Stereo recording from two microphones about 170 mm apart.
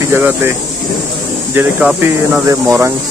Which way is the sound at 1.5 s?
5° right (ahead or behind).